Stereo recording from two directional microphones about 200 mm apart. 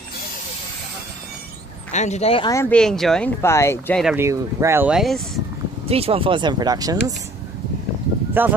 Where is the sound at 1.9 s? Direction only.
35° left (ahead or behind).